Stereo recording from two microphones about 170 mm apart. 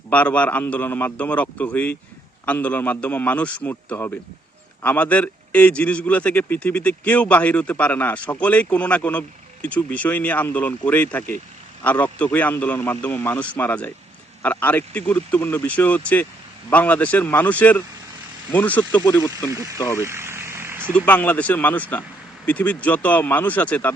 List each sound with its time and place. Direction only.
0.1 s a man's voice: 10° left (ahead or behind)
19.1 s speech: 20° left (ahead or behind)
19.5 s speech: 15° right (ahead or behind)
20.0 s vehicle: 15° right (ahead or behind)
20.9 s a man's voice: 10° left (ahead or behind)